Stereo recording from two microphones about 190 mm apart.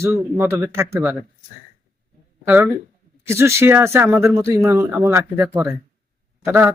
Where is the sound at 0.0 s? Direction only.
10° right (ahead or behind).